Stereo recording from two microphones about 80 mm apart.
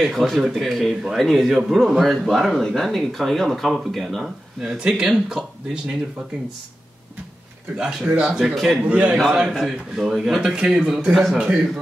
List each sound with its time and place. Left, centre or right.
0.0 s speech: centre
7.7 s a man's voice: centre
8.5 s speech: centre
8.8 s a man's voice: centre